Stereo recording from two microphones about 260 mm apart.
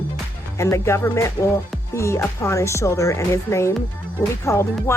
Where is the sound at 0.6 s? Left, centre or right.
Centre.